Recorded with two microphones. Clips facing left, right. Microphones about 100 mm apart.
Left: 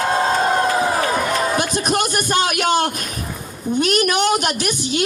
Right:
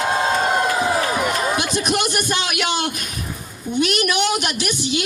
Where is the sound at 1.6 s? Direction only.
40° left (ahead or behind).